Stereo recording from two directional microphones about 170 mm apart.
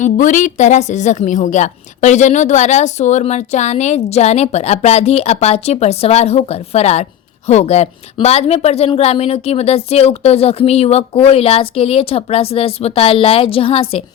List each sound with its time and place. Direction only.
0.0 s a woman's voice: 50° left (ahead or behind)